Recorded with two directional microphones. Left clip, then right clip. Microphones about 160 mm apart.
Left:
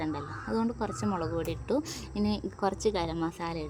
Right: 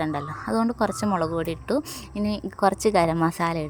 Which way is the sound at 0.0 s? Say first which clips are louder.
Right 7 dB; 30° right (ahead or behind).